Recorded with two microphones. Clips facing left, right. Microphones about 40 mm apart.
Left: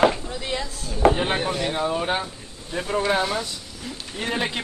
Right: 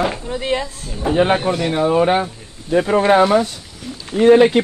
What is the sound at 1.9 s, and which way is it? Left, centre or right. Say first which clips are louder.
Speech: right 9 dB; right.